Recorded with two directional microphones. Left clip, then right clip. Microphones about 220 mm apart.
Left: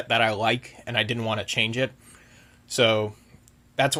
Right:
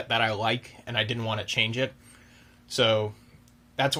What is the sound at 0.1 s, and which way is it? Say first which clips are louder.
Speech: left 3 dB; 35° left (ahead or behind).